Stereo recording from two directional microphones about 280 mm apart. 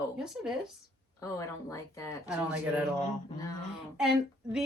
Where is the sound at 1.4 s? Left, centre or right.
Centre.